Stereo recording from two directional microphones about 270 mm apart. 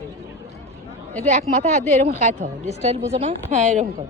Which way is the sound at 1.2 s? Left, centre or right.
Right.